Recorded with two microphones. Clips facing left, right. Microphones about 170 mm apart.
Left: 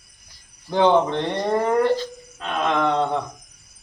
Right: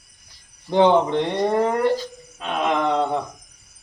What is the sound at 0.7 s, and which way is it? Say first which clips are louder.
A man's voice: right 1 dB; 15° right (ahead or behind).